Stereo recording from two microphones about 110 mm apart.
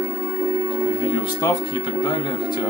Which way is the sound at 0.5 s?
25° right (ahead or behind).